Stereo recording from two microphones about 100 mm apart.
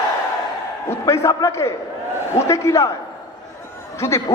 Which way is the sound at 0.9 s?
30° left (ahead or behind).